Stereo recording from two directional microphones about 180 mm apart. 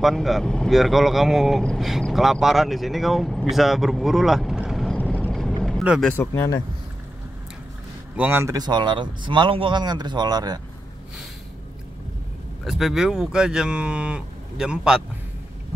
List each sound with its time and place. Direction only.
0.0 s speech: centre (ahead or behind)
5.1 s vehicle: 5° left (ahead or behind)
5.6 s speech: centre (ahead or behind)
8.2 s speech: 10° right (ahead or behind)
8.5 s speech: 25° right (ahead or behind)
12.6 s speech: centre (ahead or behind)